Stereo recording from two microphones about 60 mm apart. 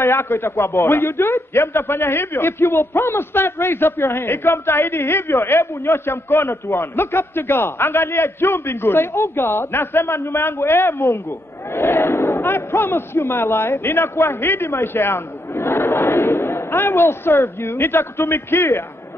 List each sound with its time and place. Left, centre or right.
0.0 s a man's voice: left